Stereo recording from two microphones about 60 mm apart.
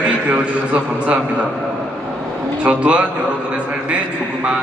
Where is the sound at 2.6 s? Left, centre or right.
Right.